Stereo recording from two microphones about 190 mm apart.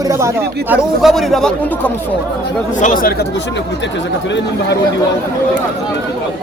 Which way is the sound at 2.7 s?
45° left (ahead or behind).